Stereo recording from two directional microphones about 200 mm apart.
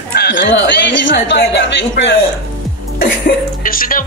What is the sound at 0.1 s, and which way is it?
Speech, 55° left (ahead or behind).